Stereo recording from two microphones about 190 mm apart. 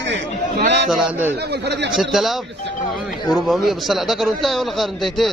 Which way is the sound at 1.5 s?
60° right (ahead or behind).